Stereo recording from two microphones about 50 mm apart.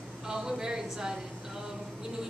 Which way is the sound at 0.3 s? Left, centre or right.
Centre.